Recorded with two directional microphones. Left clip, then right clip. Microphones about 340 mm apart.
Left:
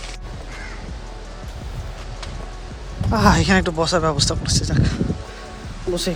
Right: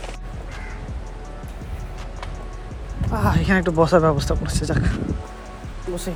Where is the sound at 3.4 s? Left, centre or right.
Centre.